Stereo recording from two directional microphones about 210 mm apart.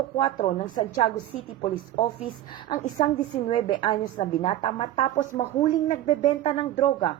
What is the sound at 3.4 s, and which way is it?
A woman's voice, 25° left (ahead or behind).